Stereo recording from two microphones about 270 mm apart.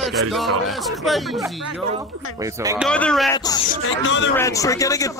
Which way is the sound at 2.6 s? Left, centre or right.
Centre.